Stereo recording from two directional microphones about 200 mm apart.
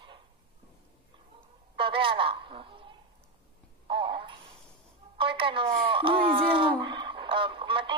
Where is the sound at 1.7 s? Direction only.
25° right (ahead or behind).